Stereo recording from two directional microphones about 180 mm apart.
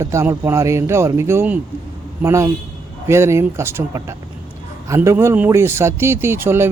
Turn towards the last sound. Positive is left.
turn(degrees=-15)  # may be behind; listen again after turning